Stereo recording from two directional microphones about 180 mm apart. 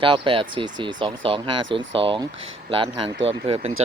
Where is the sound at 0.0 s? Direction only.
30° right (ahead or behind).